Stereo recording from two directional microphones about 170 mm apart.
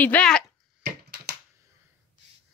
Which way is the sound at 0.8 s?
75° right (ahead or behind).